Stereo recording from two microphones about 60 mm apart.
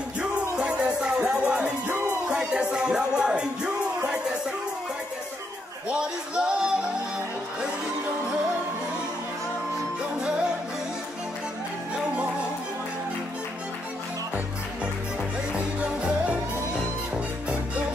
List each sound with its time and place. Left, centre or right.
0.2 s music: centre
5.9 s a sound: centre
11.9 s music: centre
15.5 s music: right